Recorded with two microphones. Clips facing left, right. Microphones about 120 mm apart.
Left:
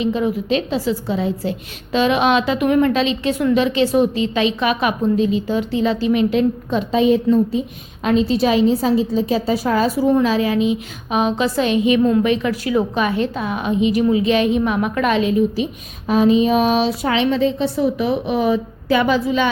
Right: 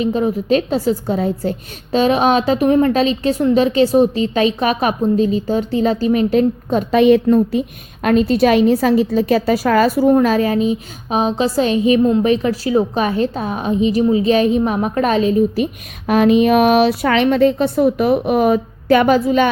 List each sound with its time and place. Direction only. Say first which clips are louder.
0.0 s a woman's voice: right 2 dB; 40° right (ahead or behind)
6.9 s speech: right 4 dB; 65° right (ahead or behind)
10.1 s a woman's voice: right 3 dB; 50° right (ahead or behind)
15.5 s speech: right 3 dB; 60° right (ahead or behind)